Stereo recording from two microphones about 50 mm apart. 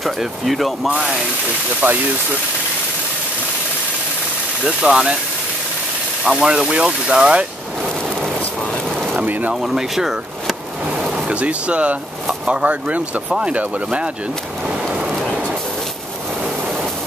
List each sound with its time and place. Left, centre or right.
0.0 s speech: centre
1.8 s speech: right
4.6 s speech: centre
6.4 s speech: centre
9.2 s speech: right
9.5 s speech: centre
10.9 s a sound: centre
11.2 s speech: right